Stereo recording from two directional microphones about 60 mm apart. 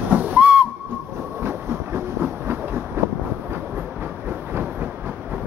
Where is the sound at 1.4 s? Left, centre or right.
Right.